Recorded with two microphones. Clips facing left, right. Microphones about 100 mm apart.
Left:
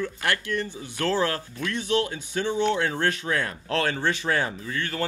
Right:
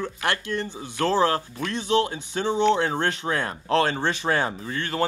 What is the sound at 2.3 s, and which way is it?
A man's voice, 35° right (ahead or behind).